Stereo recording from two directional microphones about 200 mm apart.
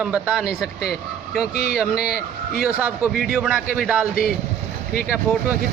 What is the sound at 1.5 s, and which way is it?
Speech, 50° left (ahead or behind).